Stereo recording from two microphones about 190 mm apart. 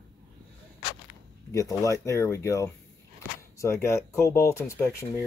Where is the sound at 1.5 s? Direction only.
15° left (ahead or behind).